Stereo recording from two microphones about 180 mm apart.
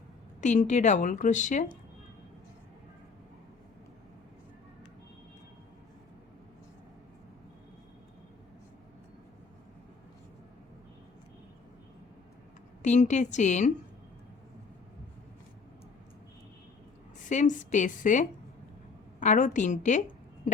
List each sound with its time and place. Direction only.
0.4 s a woman's voice: 40° left (ahead or behind)
12.8 s a woman's voice: 40° left (ahead or behind)
17.2 s a woman's voice: 45° left (ahead or behind)